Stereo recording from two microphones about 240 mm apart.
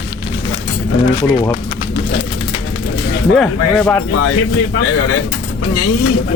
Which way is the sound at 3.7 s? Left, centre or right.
Centre.